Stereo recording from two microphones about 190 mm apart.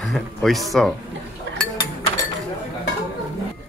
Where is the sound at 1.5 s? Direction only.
75° right (ahead or behind).